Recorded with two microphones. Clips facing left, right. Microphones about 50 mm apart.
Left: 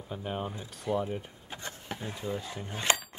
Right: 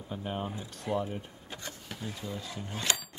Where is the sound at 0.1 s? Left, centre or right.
Centre.